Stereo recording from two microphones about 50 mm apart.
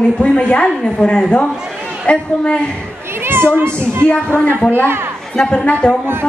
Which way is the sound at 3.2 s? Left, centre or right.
Right.